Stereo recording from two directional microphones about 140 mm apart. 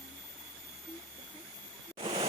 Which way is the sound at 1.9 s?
40° right (ahead or behind).